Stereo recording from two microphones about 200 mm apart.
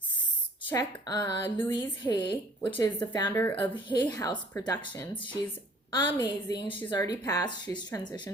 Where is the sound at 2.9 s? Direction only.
20° left (ahead or behind).